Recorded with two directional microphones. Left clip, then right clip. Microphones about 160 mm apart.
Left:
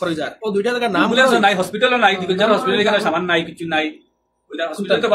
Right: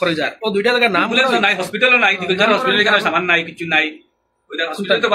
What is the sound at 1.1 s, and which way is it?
A man's voice, 35° left (ahead or behind).